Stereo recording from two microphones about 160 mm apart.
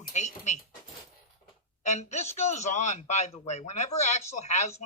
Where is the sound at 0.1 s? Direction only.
45° left (ahead or behind).